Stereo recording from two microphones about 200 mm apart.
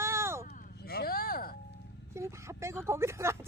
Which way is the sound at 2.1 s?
15° right (ahead or behind).